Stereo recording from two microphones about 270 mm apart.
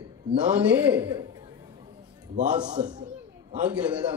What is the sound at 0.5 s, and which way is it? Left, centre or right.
Speech, centre.